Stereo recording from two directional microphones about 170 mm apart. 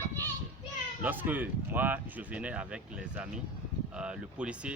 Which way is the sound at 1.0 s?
10° right (ahead or behind).